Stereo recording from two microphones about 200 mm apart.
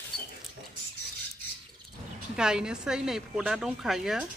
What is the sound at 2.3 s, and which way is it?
Speech, 5° right (ahead or behind).